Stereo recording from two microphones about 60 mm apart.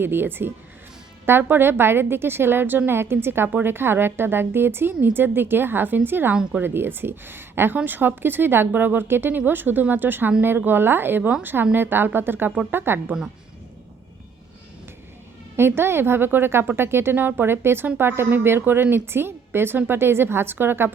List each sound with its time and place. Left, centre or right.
0.0 s a woman's voice: right
15.5 s a woman's voice: right